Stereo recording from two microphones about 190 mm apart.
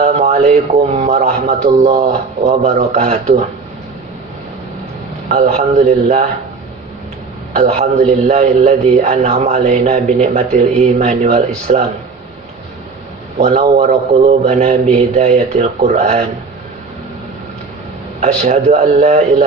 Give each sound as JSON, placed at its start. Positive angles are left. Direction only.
{"t": 0.0, "sound": "a man's voice", "side_deg": -40}
{"t": 5.3, "sound": "a man's voice", "side_deg": -40}
{"t": 7.6, "sound": "a man's voice", "side_deg": -40}
{"t": 13.4, "sound": "a man's voice", "side_deg": -40}
{"t": 18.2, "sound": "a man's voice", "side_deg": -40}